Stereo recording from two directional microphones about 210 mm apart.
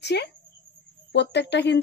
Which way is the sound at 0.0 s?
55° left (ahead or behind).